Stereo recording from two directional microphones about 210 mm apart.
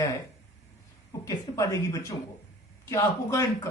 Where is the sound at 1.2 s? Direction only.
15° left (ahead or behind).